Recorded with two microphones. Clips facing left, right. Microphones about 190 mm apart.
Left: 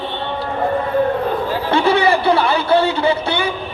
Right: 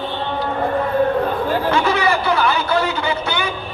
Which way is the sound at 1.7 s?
30° left (ahead or behind).